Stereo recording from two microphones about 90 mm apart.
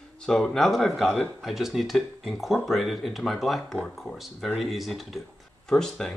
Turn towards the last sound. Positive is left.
turn(degrees=5)  # may be behind; listen again after turning